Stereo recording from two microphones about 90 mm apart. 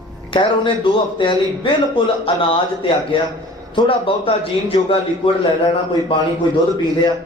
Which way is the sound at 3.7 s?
70° left (ahead or behind).